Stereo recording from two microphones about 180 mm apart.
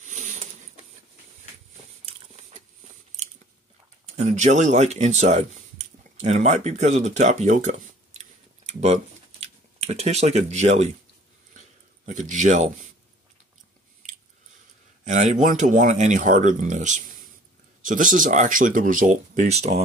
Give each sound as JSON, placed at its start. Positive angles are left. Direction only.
{"t": 0.0, "sound": "zipper", "side_deg": -40}
{"t": 4.0, "sound": "speech", "side_deg": -40}
{"t": 8.2, "sound": "typing", "side_deg": -40}
{"t": 12.1, "sound": "speech", "side_deg": -45}
{"t": 15.0, "sound": "speech", "side_deg": -45}